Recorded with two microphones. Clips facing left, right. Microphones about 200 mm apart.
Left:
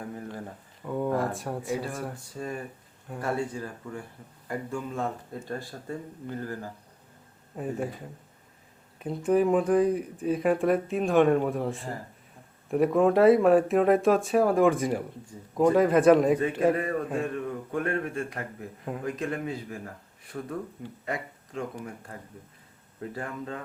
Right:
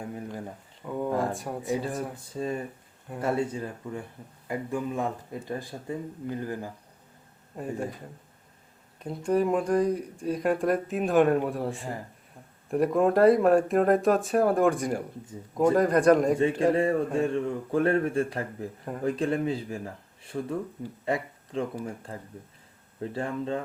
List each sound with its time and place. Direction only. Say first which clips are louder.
0.1 s a sound: right 1 dB; 15° right (ahead or behind)
0.8 s a sound: left 1 dB; centre (ahead or behind)
1.3 s speech: even; centre (ahead or behind)
1.6 s speech: right 4 dB; 20° right (ahead or behind)
7.5 s speech: left 1 dB; centre (ahead or behind)
9.0 s speech: left 2 dB; 5° left (ahead or behind)
16.7 s speech: right 4 dB; 25° right (ahead or behind)